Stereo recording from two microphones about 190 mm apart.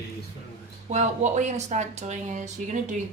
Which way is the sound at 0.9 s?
35° right (ahead or behind).